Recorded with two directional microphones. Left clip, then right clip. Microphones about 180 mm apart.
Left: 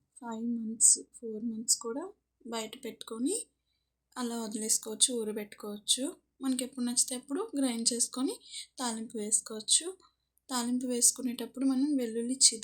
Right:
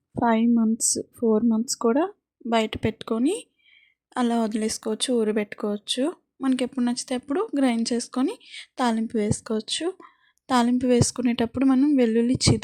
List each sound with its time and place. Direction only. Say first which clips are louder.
0.1 s speech: right 17 dB; 55° right (ahead or behind)